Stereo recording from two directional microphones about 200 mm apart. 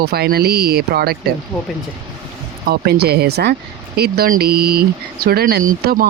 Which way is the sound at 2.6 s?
50° right (ahead or behind).